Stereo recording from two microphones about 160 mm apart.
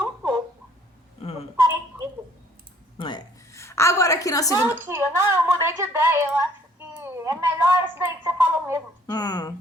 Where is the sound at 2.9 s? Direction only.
30° left (ahead or behind).